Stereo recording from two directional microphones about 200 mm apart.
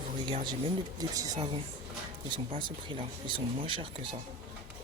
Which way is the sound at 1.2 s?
20° right (ahead or behind).